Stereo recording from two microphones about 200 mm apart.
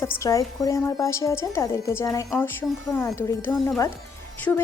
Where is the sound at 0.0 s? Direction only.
15° left (ahead or behind).